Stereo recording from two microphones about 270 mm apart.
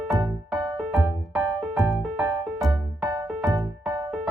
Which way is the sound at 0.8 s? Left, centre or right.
Centre.